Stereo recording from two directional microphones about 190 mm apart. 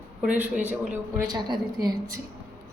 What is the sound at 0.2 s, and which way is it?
A woman's voice, 5° right (ahead or behind).